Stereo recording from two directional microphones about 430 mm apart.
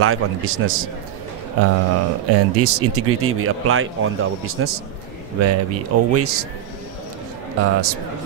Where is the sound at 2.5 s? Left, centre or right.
Right.